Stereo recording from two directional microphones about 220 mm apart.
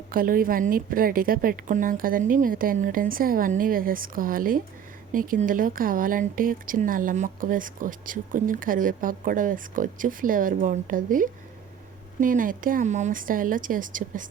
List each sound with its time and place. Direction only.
0.1 s speech: 40° right (ahead or behind)